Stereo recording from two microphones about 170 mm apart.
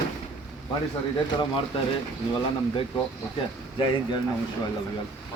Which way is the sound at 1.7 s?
35° left (ahead or behind).